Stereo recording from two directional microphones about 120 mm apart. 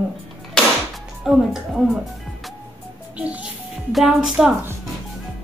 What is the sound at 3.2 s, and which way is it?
A woman's voice, 10° right (ahead or behind).